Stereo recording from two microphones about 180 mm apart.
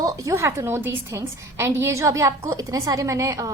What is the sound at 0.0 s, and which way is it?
A woman's voice, 20° right (ahead or behind).